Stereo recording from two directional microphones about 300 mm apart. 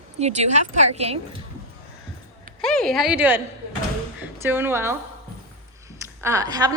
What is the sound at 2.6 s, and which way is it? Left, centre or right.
A woman's voice, centre.